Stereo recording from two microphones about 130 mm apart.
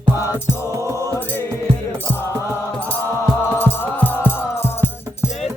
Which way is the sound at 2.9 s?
10° left (ahead or behind).